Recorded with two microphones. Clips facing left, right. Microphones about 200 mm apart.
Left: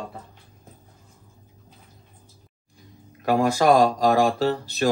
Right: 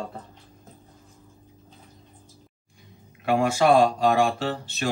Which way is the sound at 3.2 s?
40° left (ahead or behind).